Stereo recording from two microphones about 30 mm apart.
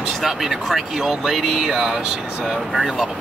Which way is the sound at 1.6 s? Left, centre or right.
Centre.